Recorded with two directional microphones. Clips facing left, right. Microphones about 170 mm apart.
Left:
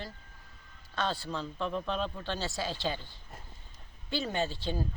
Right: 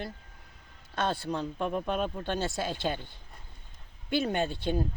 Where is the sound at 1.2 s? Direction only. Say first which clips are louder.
Right 4 dB; 15° right (ahead or behind).